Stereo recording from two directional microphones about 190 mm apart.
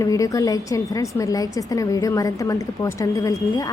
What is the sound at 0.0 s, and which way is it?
A woman's voice, 15° left (ahead or behind).